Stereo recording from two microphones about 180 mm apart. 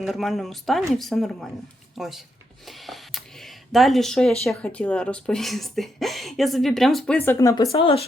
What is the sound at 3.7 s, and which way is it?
A woman's voice, centre (ahead or behind).